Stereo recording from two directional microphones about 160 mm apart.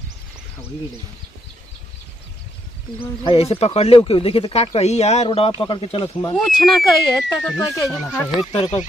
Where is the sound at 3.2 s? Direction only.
35° left (ahead or behind).